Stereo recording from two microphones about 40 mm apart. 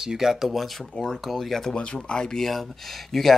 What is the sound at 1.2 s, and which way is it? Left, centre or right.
Speech, centre.